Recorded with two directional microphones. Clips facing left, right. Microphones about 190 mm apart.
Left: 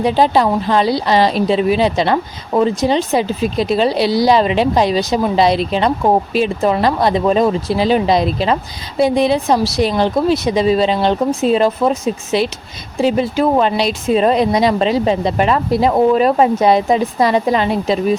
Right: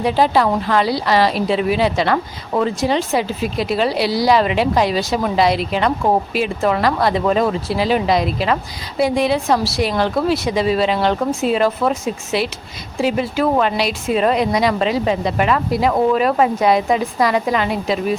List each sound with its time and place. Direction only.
0.0 s speech: 20° left (ahead or behind)